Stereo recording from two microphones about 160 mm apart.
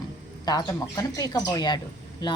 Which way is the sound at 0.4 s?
25° left (ahead or behind).